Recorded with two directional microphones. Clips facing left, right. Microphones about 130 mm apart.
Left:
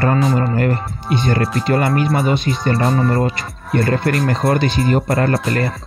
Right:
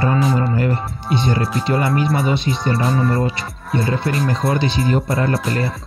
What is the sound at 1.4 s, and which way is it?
Speech, centre (ahead or behind).